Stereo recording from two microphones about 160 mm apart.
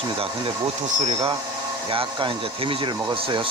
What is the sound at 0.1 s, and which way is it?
Speech, 35° right (ahead or behind).